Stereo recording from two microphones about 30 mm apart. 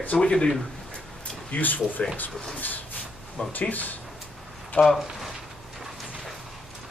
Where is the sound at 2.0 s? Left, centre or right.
Left.